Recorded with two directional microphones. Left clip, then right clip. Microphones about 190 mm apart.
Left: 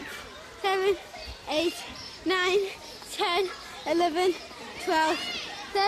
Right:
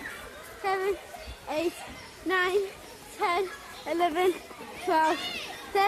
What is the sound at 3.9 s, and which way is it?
Speech, 20° left (ahead or behind).